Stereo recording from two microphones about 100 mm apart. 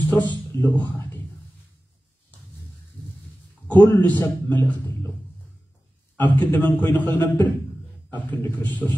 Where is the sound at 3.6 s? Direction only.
15° left (ahead or behind).